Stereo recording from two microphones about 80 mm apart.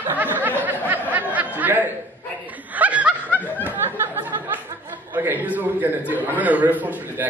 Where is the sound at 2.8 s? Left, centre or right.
Centre.